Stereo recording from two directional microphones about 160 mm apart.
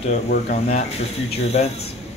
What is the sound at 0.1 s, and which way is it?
Speech, 60° left (ahead or behind).